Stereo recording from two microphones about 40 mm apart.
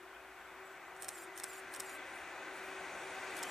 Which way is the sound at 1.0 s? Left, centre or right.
Centre.